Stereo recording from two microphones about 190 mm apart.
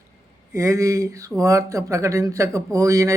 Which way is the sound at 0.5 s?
15° right (ahead or behind).